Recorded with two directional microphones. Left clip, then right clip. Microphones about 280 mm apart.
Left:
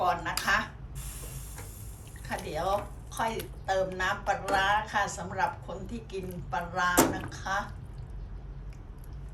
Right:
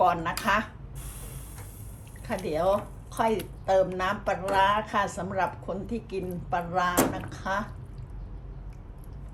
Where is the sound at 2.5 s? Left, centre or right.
Right.